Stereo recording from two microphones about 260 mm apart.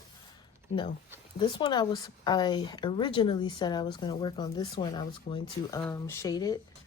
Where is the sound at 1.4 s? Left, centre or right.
Centre.